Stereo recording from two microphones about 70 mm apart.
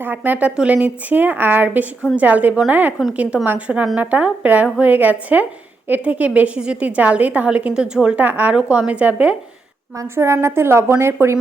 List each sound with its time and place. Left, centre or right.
0.0 s a woman's voice: right
10.0 s a woman's voice: right